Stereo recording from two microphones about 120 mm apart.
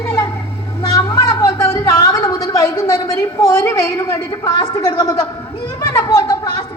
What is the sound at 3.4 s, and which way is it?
A woman's voice, 25° left (ahead or behind).